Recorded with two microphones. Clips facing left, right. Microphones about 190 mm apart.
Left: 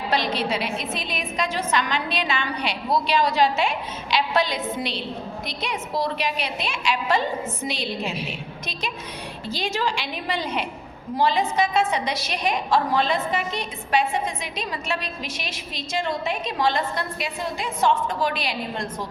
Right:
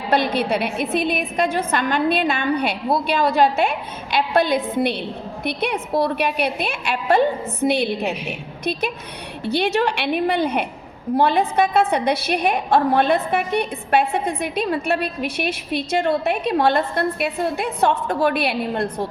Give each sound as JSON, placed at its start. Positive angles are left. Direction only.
{"t": 0.1, "sound": "a woman's voice", "side_deg": -55}